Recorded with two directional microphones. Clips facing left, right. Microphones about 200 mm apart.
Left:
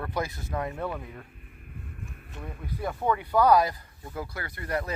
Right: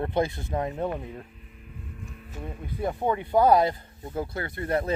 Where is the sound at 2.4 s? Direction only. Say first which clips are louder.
Right 3 dB; 25° right (ahead or behind).